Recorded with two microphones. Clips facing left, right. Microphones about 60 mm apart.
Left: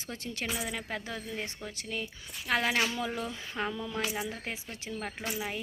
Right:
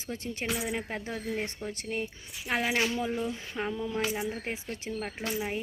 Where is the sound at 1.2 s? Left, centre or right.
Right.